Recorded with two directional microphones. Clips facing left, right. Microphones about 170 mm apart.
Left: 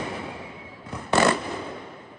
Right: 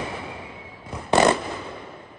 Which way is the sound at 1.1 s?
20° right (ahead or behind).